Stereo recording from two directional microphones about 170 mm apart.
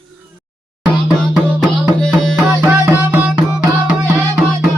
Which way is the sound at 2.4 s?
10° right (ahead or behind).